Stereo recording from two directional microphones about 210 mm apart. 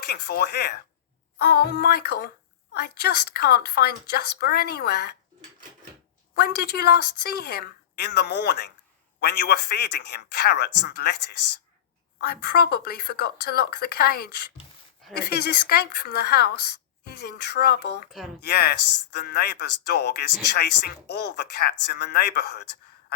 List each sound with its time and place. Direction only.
0.1 s speech: 50° left (ahead or behind)
6.3 s speech: 50° left (ahead or behind)